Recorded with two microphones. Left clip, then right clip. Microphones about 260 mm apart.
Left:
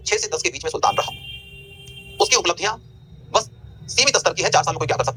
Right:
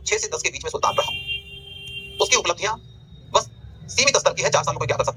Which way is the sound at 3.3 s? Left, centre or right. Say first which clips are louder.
Even; centre.